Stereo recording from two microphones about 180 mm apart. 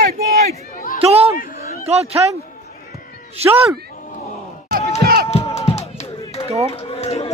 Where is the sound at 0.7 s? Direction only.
50° left (ahead or behind).